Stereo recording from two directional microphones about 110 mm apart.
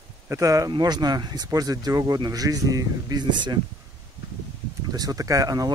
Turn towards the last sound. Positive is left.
turn(degrees=-35)  # may be behind; listen again after turning